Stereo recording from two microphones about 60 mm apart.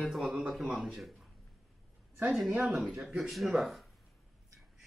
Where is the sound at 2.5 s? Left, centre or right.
Right.